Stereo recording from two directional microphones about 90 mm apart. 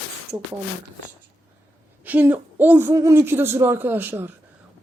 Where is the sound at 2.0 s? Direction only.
20° right (ahead or behind).